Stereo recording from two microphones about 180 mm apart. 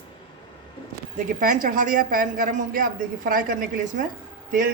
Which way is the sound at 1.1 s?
50° right (ahead or behind).